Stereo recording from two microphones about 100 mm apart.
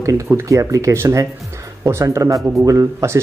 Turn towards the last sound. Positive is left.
turn(degrees=-30)  # may be behind; listen again after turning